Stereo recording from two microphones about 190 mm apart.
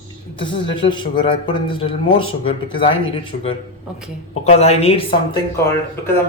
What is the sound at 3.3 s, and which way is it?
A woman's voice, 40° left (ahead or behind).